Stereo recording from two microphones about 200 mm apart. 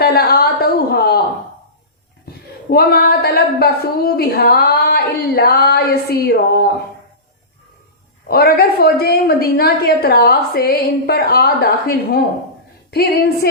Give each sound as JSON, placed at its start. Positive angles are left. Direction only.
{"t": 0.0, "sound": "a sound", "side_deg": 50}
{"t": 2.2, "sound": "a woman's voice", "side_deg": 50}
{"t": 8.3, "sound": "a woman's voice", "side_deg": 50}